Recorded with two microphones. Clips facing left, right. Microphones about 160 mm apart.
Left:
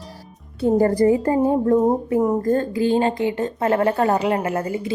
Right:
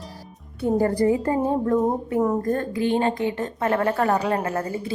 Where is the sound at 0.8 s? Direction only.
40° left (ahead or behind).